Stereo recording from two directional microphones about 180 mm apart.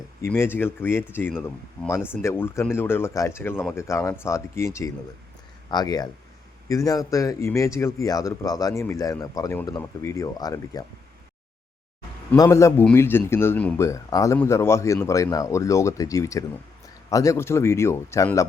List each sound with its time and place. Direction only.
0.2 s speech: 15° left (ahead or behind)
12.4 s speech: 15° left (ahead or behind)